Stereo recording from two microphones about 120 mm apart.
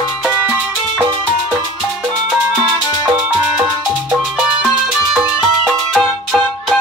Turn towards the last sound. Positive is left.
turn(degrees=0)  # may be behind; listen again after turning